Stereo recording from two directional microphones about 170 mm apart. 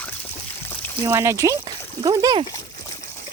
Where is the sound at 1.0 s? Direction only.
15° right (ahead or behind).